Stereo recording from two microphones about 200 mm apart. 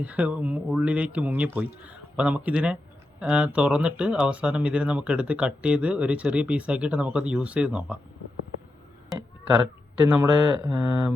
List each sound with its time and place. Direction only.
0.0 s speech: 5° right (ahead or behind)
9.1 s speech: 15° right (ahead or behind)